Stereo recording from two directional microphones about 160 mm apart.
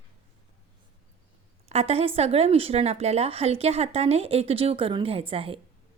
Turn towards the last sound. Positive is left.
turn(degrees=-35)  # may be behind; listen again after turning